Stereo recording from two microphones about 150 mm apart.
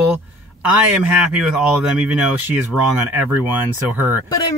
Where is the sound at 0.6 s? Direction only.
10° right (ahead or behind).